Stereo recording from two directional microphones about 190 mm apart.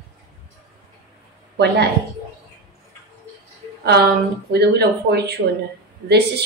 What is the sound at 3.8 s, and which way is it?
A woman's voice, 60° right (ahead or behind).